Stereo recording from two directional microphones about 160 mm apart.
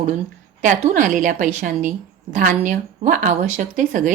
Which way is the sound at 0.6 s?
55° right (ahead or behind).